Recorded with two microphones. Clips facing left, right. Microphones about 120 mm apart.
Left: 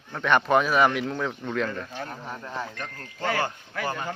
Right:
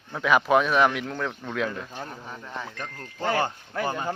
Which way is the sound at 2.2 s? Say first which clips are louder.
Left 3 dB; 5° left (ahead or behind).